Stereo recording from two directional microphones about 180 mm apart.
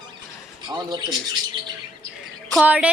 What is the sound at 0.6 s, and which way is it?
Speech, 25° right (ahead or behind).